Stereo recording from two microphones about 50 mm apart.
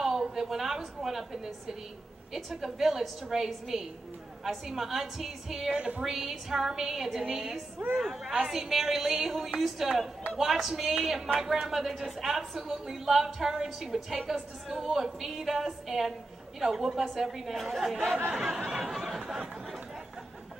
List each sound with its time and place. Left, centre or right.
0.0 s a woman's voice: centre
5.8 s speech: centre
6.1 s a woman's voice: centre